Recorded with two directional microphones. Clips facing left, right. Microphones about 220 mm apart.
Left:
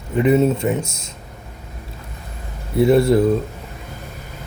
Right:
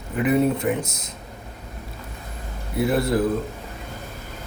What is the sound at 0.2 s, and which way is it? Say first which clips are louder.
Speech: left 4 dB; 25° left (ahead or behind).